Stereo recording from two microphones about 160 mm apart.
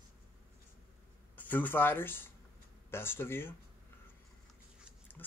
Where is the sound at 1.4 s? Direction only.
10° left (ahead or behind).